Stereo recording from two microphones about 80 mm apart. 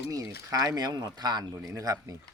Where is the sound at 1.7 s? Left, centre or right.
Right.